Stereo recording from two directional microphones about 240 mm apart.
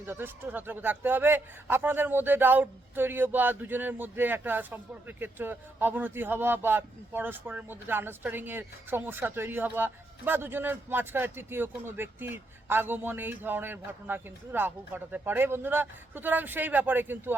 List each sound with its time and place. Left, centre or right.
0.0 s a man's voice: centre